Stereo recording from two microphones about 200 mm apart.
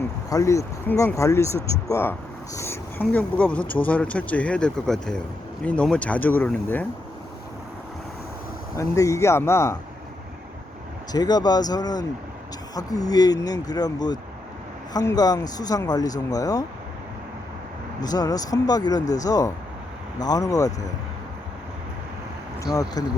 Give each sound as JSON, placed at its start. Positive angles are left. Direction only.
{"t": 0.3, "sound": "speech", "side_deg": 15}
{"t": 8.7, "sound": "speech", "side_deg": 15}
{"t": 11.1, "sound": "speech", "side_deg": 20}
{"t": 18.0, "sound": "speech", "side_deg": 20}
{"t": 22.6, "sound": "speech", "side_deg": 15}